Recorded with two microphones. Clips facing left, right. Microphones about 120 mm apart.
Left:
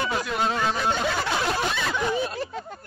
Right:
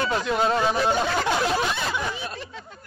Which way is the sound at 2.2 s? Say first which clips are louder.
Left 7 dB; 45° left (ahead or behind).